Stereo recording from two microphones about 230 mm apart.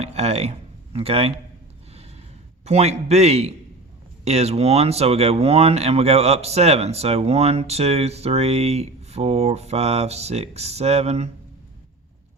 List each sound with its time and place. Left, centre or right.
0.0 s a sound: right
0.9 s speech: right
2.6 s speech: right